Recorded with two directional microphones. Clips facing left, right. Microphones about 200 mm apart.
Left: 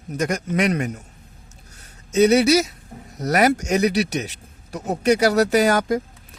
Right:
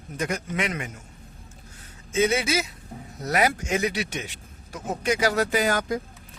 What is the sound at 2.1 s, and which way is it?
Speech, 40° left (ahead or behind).